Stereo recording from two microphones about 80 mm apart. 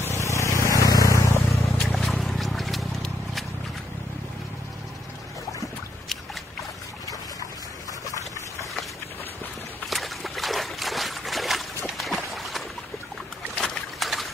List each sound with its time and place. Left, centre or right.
0.0 s a sound: left
0.7 s vehicle: left
1.8 s boat: centre
9.8 s trickle: centre
13.6 s boat: centre